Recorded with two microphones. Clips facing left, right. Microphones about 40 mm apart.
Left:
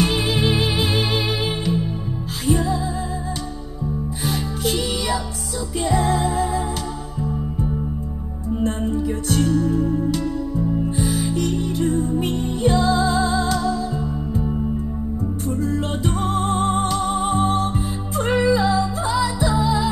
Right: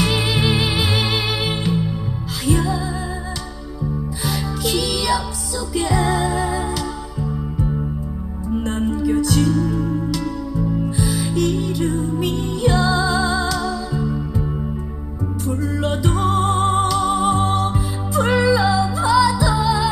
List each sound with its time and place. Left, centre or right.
0.0 s music: right
4.2 s music: right
8.6 s music: right
8.9 s music: right
11.1 s music: right
15.4 s music: right